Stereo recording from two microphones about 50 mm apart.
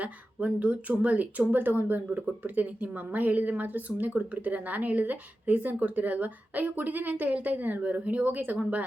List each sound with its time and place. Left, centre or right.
0.0 s a woman's voice: right